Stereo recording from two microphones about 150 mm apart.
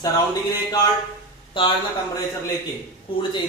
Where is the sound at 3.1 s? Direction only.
35° left (ahead or behind).